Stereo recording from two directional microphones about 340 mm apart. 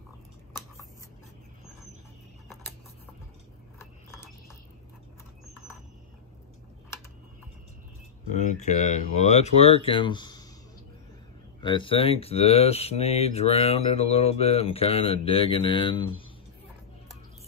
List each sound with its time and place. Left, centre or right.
2.4 s a sound: centre
8.3 s speech: left
11.6 s speech: centre